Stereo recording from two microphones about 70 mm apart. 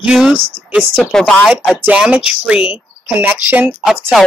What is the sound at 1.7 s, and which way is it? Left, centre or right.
Speech, right.